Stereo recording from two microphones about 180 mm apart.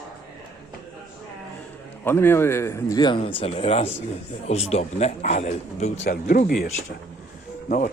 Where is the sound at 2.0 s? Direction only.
10° left (ahead or behind); by 6.0 s 40° left (ahead or behind).